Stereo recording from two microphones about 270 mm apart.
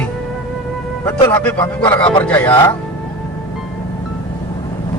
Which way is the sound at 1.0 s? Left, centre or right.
Centre.